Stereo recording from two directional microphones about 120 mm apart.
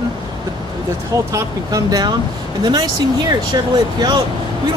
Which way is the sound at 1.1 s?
25° right (ahead or behind).